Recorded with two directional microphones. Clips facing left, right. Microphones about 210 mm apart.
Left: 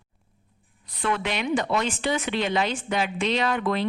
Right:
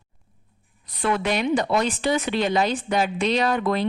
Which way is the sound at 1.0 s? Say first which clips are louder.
Right 4 dB; 40° right (ahead or behind).